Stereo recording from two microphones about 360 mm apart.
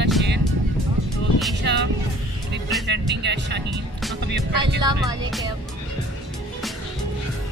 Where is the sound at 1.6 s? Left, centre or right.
Right.